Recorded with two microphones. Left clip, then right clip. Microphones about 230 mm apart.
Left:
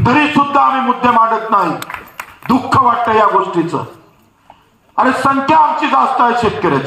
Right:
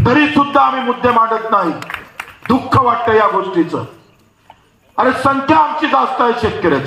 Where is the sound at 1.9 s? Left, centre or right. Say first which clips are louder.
Right 1 dB; right.